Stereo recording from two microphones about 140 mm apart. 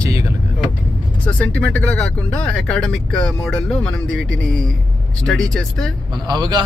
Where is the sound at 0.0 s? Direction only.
25° right (ahead or behind).